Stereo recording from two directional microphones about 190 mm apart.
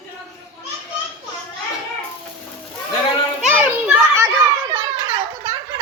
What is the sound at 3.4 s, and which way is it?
Children playing, 5° right (ahead or behind).